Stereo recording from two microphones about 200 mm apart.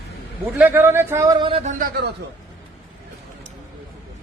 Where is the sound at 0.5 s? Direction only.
10° right (ahead or behind); by 1.7 s 25° right (ahead or behind).